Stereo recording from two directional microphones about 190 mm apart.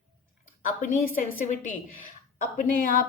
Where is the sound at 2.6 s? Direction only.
45° left (ahead or behind).